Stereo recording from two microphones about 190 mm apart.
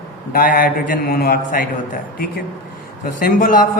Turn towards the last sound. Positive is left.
turn(degrees=45)  # may be behind; listen again after turning